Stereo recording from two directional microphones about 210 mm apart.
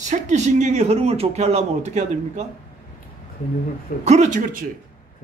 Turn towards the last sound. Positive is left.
turn(degrees=-35)  # may be behind; listen again after turning